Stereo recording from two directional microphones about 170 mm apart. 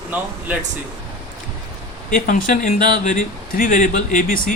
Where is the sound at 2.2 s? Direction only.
50° left (ahead or behind).